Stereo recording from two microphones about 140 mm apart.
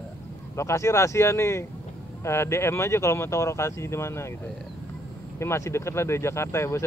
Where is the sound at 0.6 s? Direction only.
20° left (ahead or behind).